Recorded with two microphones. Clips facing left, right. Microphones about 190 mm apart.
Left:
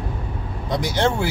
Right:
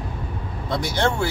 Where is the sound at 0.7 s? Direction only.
20° left (ahead or behind).